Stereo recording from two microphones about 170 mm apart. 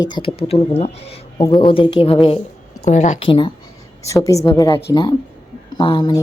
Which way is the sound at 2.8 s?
45° left (ahead or behind).